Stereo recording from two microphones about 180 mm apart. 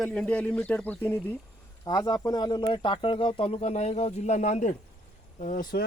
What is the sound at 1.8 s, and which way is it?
Speech, 20° left (ahead or behind).